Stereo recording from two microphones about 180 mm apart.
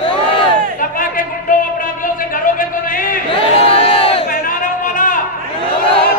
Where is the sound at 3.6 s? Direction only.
35° left (ahead or behind).